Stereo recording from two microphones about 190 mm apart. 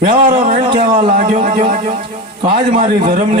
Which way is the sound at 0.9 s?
45° right (ahead or behind).